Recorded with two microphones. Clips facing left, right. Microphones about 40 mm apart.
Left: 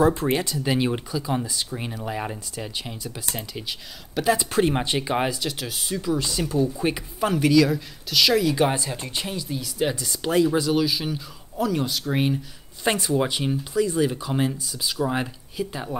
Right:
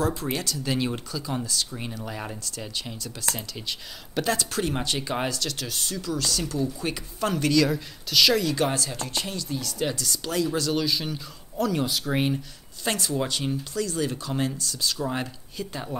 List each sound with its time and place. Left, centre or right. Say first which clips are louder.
0.0 s speech: left 7 dB; left; by 4.4 s centre
4.4 s speech: left 6 dB; left
10.7 s speech: left 3 dB; centre
12.8 s speech: left 5 dB; left